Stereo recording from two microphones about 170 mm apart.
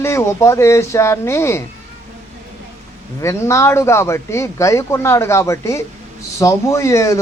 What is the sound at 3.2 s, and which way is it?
Speech, 15° left (ahead or behind).